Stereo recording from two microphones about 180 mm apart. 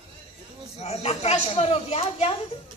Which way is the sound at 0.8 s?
35° left (ahead or behind).